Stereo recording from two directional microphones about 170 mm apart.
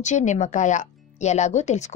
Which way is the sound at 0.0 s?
45° left (ahead or behind).